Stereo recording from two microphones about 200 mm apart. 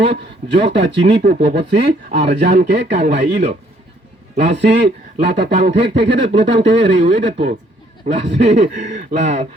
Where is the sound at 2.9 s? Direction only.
35° right (ahead or behind).